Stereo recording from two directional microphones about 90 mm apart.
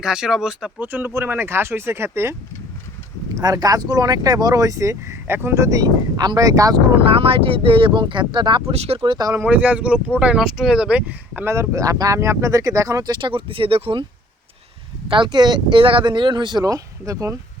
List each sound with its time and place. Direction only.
0.0 s speech: 5° right (ahead or behind)
0.9 s speech: 20° right (ahead or behind)
3.4 s speech: 45° right (ahead or behind)
7.0 s speech: 90° right; by 9.2 s 65° right (ahead or behind)
9.4 s speech: 15° right (ahead or behind)
11.4 s speech: 30° right (ahead or behind)
13.1 s speech: 60° right (ahead or behind); by 14.0 s 90° right
15.1 s speech: 60° right (ahead or behind)
16.6 s speech: 35° right (ahead or behind)